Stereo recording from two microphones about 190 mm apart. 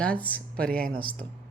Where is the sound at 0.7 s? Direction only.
50° right (ahead or behind).